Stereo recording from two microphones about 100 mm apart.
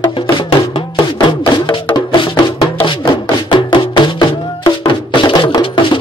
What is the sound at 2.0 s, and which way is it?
Music, 50° left (ahead or behind).